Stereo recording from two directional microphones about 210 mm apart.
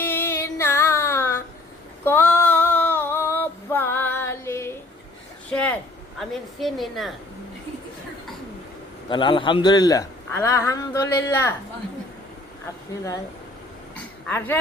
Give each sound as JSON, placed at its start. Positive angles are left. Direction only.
{"t": 0.0, "sound": "music", "side_deg": 10}
{"t": 2.0, "sound": "female singing", "side_deg": 10}
{"t": 6.1, "sound": "a woman's voice", "side_deg": 0}
{"t": 9.0, "sound": "a man's voice", "side_deg": 25}
{"t": 14.3, "sound": "a man's voice", "side_deg": 10}